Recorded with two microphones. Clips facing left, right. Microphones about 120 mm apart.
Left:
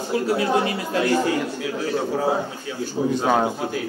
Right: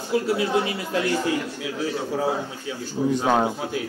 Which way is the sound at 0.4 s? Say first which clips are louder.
Left 2 dB; 30° left (ahead or behind).